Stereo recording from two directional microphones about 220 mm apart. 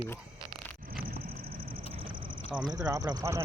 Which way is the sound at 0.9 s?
45° right (ahead or behind).